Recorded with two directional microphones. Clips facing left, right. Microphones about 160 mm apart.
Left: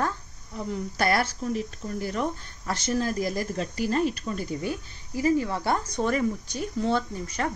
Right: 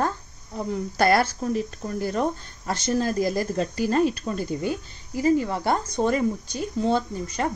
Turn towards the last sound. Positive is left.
turn(degrees=-20)  # may be behind; listen again after turning